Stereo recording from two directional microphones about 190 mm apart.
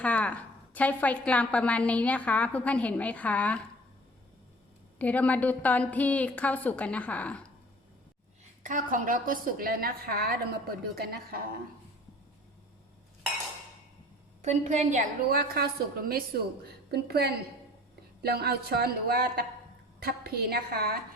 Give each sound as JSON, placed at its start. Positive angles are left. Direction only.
{"t": 0.0, "sound": "a woman's voice", "side_deg": 5}
{"t": 4.9, "sound": "a woman's voice", "side_deg": 10}
{"t": 8.6, "sound": "a woman's voice", "side_deg": -45}
{"t": 14.4, "sound": "a woman's voice", "side_deg": -40}